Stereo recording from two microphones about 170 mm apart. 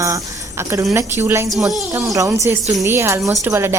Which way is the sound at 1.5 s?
Centre (ahead or behind).